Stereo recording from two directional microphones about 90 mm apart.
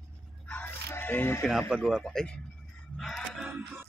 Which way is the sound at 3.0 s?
5° left (ahead or behind).